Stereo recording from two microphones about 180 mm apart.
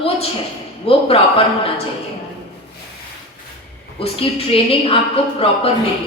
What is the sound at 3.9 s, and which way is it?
Speech, 30° left (ahead or behind).